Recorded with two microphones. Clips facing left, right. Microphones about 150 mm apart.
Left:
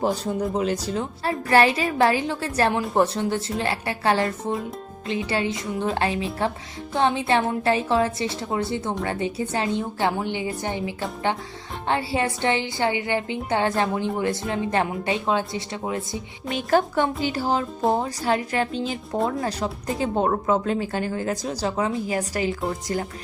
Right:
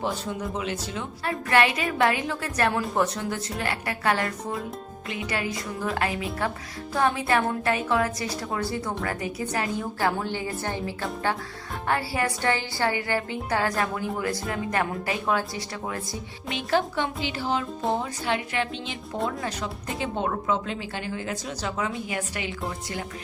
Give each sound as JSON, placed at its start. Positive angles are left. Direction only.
{"t": 0.0, "sound": "a woman's voice", "side_deg": 40}
{"t": 16.6, "sound": "speech", "side_deg": 45}